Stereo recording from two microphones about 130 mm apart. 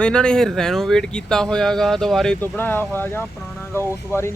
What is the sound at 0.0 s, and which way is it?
Speech, 5° left (ahead or behind).